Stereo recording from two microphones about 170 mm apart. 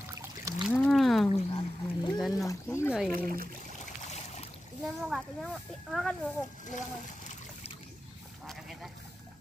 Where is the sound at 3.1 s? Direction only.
55° right (ahead or behind).